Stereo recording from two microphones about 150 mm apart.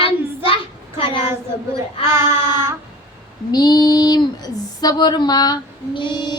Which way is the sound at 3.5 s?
25° left (ahead or behind).